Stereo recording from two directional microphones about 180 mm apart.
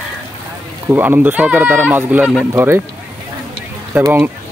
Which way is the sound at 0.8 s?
10° right (ahead or behind).